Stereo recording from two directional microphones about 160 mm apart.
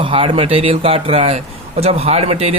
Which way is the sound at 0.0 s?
35° right (ahead or behind).